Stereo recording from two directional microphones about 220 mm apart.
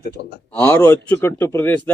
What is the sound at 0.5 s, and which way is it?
Speech, 10° left (ahead or behind).